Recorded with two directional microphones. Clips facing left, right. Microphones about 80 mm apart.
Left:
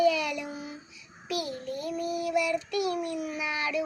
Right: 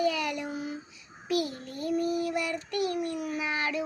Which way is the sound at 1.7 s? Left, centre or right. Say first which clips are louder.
Right 2 dB; right.